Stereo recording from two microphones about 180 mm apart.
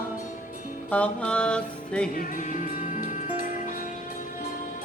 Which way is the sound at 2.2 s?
50° left (ahead or behind).